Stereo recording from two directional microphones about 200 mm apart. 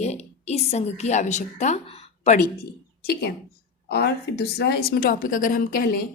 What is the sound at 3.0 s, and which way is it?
A woman's voice, 50° left (ahead or behind).